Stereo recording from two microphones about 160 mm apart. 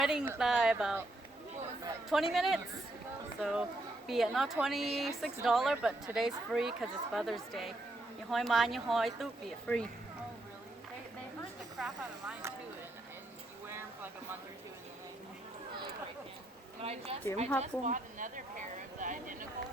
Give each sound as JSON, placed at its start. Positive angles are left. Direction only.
{"t": 0.0, "sound": "a woman's voice", "side_deg": -5}
{"t": 2.0, "sound": "a woman's voice", "side_deg": 0}
{"t": 9.7, "sound": "speech", "side_deg": 10}
{"t": 11.8, "sound": "a woman's voice", "side_deg": -5}
{"t": 13.7, "sound": "a sound", "side_deg": -15}
{"t": 16.8, "sound": "a woman's voice", "side_deg": -40}
{"t": 17.6, "sound": "a woman's voice", "side_deg": -50}